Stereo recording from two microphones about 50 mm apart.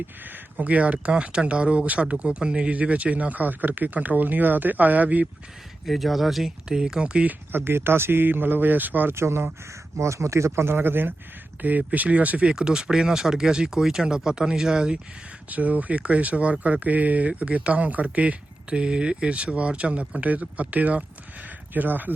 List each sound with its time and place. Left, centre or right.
0.5 s speech: right
5.8 s speech: centre
6.7 s speech: centre
7.0 s speech: right
7.5 s speech: right
9.1 s speech: right
10.0 s speech: right
11.6 s speech: right
12.5 s speech: centre
15.4 s speech: right